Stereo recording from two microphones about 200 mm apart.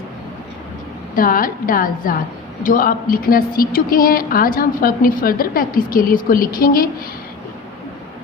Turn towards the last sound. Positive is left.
turn(degrees=45)  # may be behind; listen again after turning